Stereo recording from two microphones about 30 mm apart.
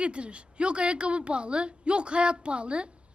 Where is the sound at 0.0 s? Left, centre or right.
Right.